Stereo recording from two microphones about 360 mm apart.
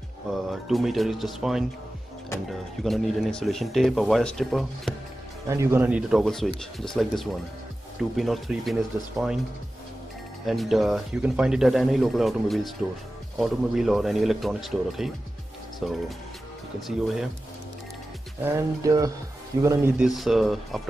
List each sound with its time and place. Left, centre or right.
0.3 s speech: centre
10.4 s speech: centre
18.4 s speech: centre